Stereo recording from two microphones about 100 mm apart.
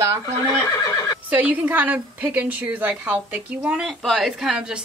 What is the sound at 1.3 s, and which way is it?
A woman's voice, 15° right (ahead or behind).